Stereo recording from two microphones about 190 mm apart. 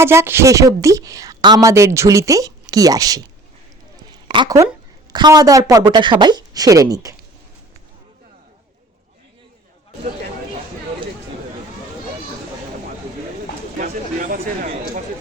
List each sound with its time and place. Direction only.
0.0 s a woman's voice: 15° right (ahead or behind)
4.3 s a woman's voice: 20° right (ahead or behind)
13.7 s a sound: 45° right (ahead or behind)